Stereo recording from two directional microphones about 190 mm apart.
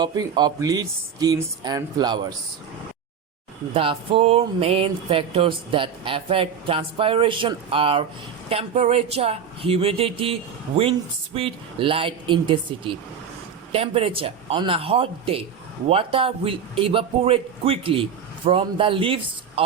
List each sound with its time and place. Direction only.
0.0 s speech: 20° right (ahead or behind)
3.8 s speech: 30° right (ahead or behind)
11.3 s speech: 30° right (ahead or behind)